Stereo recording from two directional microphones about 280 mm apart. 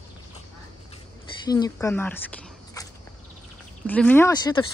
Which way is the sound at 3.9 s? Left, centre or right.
Centre.